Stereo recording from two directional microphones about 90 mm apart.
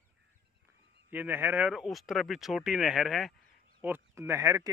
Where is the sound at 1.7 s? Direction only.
5° right (ahead or behind).